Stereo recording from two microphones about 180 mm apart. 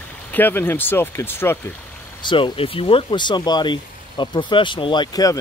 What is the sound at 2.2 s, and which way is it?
Speech, 25° left (ahead or behind).